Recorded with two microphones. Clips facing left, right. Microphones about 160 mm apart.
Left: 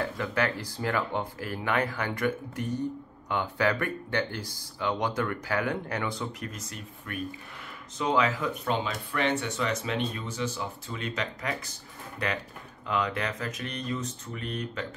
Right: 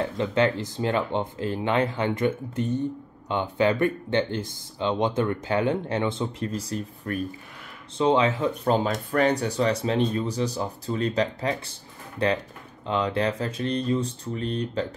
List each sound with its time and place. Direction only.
0.0 s speech: 25° right (ahead or behind)